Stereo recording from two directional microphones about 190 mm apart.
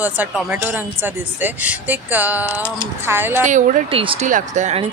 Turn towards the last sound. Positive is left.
turn(degrees=-40)  # may be behind; listen again after turning